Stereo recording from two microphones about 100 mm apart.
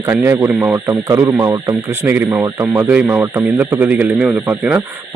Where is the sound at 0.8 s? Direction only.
30° right (ahead or behind).